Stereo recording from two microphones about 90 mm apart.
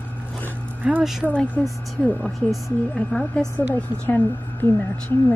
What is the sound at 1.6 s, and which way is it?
Speech, 20° left (ahead or behind).